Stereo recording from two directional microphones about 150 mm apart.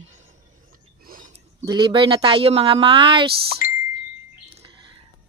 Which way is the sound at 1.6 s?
30° right (ahead or behind).